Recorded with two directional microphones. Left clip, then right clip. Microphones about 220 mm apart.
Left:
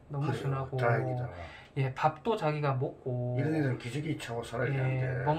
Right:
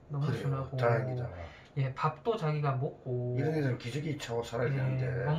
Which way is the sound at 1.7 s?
50° left (ahead or behind).